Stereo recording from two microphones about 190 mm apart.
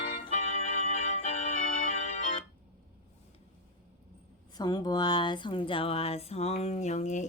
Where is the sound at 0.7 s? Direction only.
30° left (ahead or behind).